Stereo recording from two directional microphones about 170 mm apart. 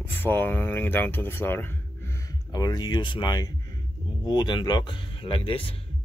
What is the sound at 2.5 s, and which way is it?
Speech, 25° left (ahead or behind).